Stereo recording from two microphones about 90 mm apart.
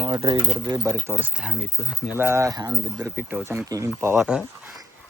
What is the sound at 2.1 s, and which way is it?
Speech, 30° right (ahead or behind).